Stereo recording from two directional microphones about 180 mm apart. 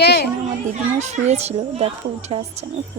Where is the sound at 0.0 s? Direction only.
65° left (ahead or behind).